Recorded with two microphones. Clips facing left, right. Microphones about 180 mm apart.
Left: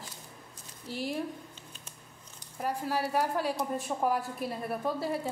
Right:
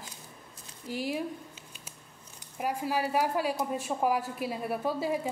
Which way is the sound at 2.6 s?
10° right (ahead or behind).